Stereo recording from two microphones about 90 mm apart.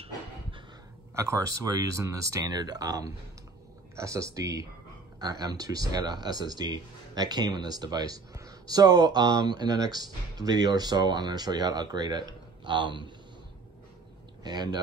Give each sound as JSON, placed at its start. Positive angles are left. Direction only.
{"t": 0.0, "sound": "a sound", "side_deg": -70}
{"t": 1.1, "sound": "speech", "side_deg": -35}
{"t": 14.4, "sound": "speech", "side_deg": -50}